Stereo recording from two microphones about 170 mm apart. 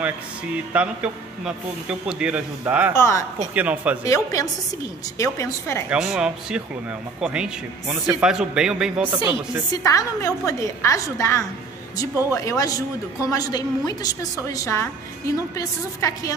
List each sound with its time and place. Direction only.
0.7 s a man's voice: 5° right (ahead or behind)
2.9 s a woman's voice: 15° left (ahead or behind)
3.5 s a man's voice: 10° right (ahead or behind)
4.0 s a woman's voice: 20° left (ahead or behind)
5.9 s a man's voice: 5° right (ahead or behind)
9.8 s a woman's voice: 20° left (ahead or behind)